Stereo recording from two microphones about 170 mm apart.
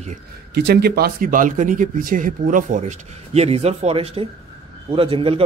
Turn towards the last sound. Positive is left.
turn(degrees=-30)  # may be behind; listen again after turning